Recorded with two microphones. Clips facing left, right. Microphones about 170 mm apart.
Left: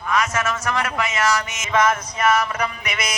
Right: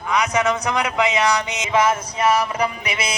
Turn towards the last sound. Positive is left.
turn(degrees=-30)  # may be behind; listen again after turning